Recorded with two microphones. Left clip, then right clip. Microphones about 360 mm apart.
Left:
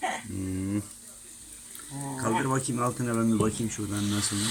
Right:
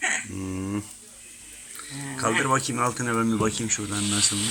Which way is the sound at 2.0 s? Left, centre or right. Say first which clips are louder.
Right 5 dB; centre.